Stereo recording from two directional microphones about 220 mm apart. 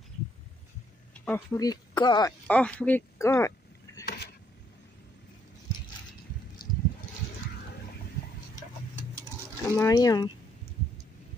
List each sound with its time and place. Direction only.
1.2 s speech: 10° left (ahead or behind)
2.4 s speech: 5° left (ahead or behind)
9.7 s speech: 15° left (ahead or behind)